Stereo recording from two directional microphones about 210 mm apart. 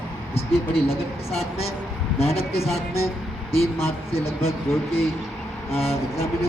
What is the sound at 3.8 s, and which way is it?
Speech, 30° left (ahead or behind).